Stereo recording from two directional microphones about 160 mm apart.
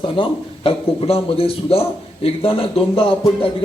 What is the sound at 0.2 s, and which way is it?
A man's voice, 35° left (ahead or behind).